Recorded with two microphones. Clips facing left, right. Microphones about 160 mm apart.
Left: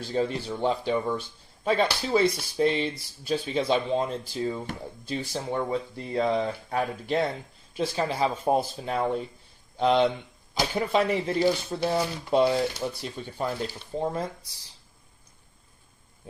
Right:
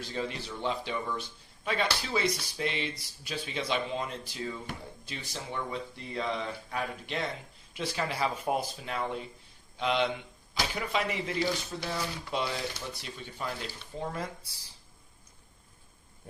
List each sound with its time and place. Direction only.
0.1 s speech: 35° left (ahead or behind)
7.8 s speech: 30° left (ahead or behind)